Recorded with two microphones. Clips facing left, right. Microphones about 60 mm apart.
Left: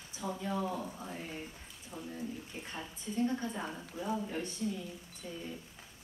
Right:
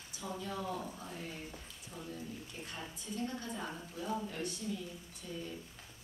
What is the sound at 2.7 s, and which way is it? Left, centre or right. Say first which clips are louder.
Speech: left 6 dB; left.